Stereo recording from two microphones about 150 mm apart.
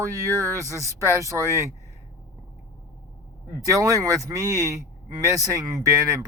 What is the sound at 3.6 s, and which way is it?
Speech, 20° right (ahead or behind).